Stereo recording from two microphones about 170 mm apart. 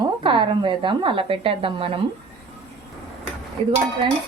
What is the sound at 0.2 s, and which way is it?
A woman's voice, 30° right (ahead or behind).